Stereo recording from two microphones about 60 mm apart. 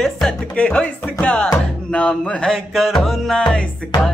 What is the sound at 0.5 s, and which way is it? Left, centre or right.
Music, left.